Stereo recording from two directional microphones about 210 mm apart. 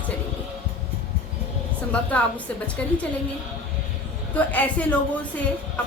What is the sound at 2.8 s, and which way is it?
Speech, 10° left (ahead or behind).